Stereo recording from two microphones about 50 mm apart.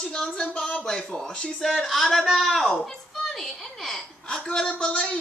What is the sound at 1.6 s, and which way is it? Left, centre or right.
A man's voice, centre.